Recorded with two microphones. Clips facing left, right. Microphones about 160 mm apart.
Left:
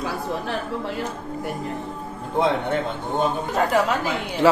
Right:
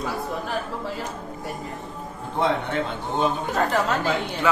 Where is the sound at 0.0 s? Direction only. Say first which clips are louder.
Left 2 dB; 65° left (ahead or behind).